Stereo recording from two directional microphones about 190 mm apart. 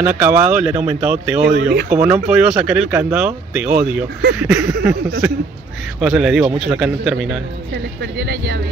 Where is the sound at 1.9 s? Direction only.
10° right (ahead or behind).